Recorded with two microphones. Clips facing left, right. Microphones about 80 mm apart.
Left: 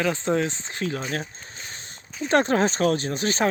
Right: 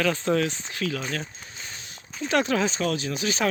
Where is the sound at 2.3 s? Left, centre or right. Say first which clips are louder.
Left 3 dB; left.